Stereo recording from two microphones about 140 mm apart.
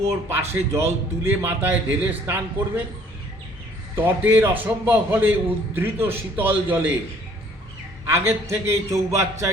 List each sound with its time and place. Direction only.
0.0 s a man's voice: 20° right (ahead or behind)
3.9 s a man's voice: 15° right (ahead or behind)
8.0 s a man's voice: 20° right (ahead or behind)